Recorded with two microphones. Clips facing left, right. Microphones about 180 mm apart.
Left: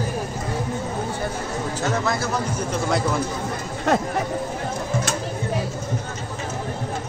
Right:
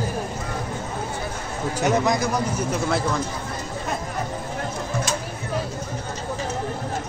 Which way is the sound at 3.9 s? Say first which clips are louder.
Left 10 dB; 75° left (ahead or behind).